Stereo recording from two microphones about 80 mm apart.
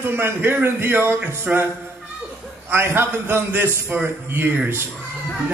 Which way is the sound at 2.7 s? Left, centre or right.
Right.